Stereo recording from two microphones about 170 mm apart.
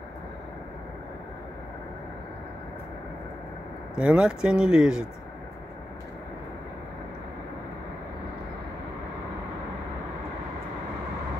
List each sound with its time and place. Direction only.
3.9 s speech: 5° right (ahead or behind)